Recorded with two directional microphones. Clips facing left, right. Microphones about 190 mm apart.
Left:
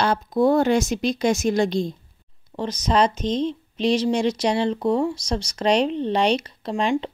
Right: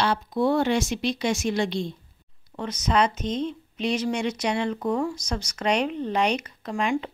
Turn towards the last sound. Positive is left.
turn(degrees=30)  # may be behind; listen again after turning